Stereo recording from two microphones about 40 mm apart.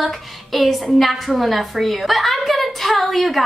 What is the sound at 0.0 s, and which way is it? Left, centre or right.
A woman's voice, centre.